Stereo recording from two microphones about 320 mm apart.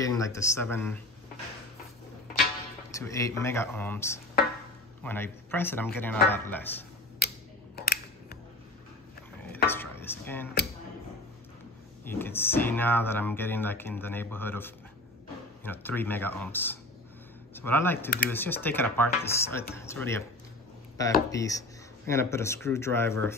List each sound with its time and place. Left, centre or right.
0.0 s speech: centre
2.9 s speech: centre
7.2 s a sound: left
9.7 s dishes: centre
12.0 s speech: centre
21.3 s speech: centre